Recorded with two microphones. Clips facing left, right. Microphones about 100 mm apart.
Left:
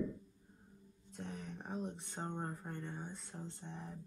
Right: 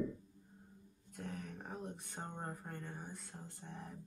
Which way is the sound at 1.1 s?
20° left (ahead or behind).